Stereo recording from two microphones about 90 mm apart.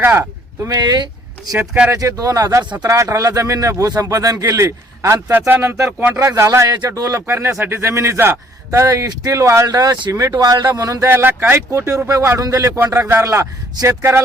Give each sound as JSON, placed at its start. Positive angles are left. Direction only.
{"t": 0.2, "sound": "speech", "side_deg": -35}
{"t": 0.8, "sound": "speech", "side_deg": -55}
{"t": 1.5, "sound": "speech", "side_deg": -15}
{"t": 1.9, "sound": "a man's voice", "side_deg": -40}
{"t": 8.9, "sound": "speech", "side_deg": -40}
{"t": 11.1, "sound": "speech", "side_deg": -25}